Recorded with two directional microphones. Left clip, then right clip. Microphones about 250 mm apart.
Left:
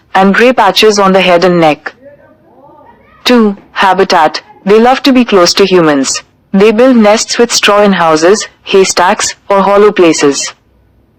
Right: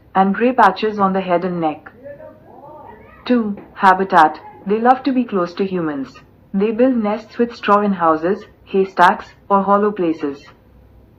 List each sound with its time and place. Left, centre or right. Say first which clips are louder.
0.1 s a woman's voice: left 10 dB; left
3.2 s a woman's voice: left 12 dB; left